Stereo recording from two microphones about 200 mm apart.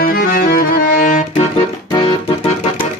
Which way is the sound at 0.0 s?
45° left (ahead or behind).